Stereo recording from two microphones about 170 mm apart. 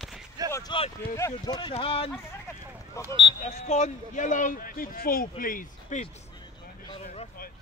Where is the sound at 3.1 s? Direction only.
30° right (ahead or behind).